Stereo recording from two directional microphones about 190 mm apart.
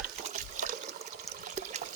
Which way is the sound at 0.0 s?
40° right (ahead or behind).